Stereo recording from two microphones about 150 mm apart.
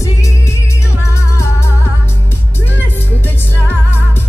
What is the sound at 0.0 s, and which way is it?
Music, 20° left (ahead or behind).